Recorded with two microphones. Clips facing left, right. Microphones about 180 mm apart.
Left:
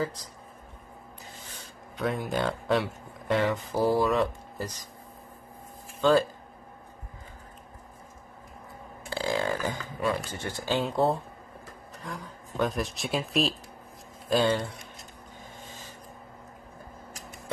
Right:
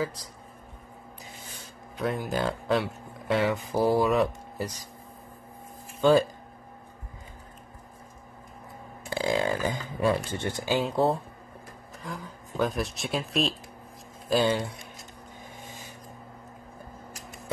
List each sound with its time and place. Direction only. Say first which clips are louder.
2.0 s speech: even; centre (ahead or behind)
3.4 s speech: right 1 dB; 10° right (ahead or behind)
5.9 s speech: right 2 dB; 15° right (ahead or behind)
9.1 s speech: right 2 dB; 15° right (ahead or behind)
10.8 s speech: even; centre (ahead or behind)